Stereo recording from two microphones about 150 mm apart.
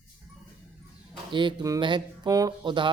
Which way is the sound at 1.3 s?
30° right (ahead or behind).